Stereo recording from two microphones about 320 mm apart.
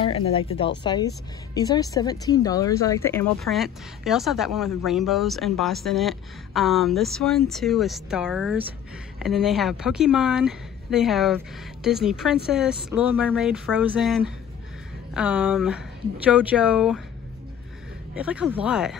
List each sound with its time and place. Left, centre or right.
0.0 s speech: centre
18.1 s speech: centre